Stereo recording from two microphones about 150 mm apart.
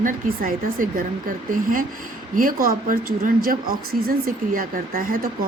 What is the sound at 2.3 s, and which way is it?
A woman's voice, 70° right (ahead or behind).